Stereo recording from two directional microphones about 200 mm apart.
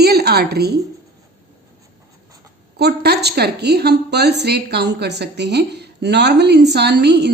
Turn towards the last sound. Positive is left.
turn(degrees=-55)  # may be behind; listen again after turning